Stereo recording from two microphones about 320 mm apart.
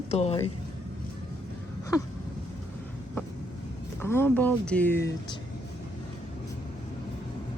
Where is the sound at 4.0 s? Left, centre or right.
Centre.